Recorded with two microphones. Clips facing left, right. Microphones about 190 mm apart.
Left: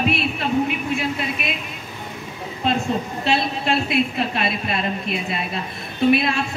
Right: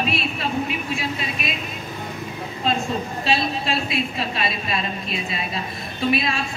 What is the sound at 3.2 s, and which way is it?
A woman's voice, 60° left (ahead or behind).